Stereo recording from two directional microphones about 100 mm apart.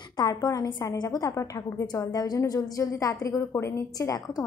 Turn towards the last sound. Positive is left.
turn(degrees=30)  # may be behind; listen again after turning